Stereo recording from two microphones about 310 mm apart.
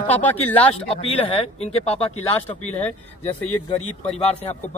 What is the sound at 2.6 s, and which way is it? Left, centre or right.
Speech, centre.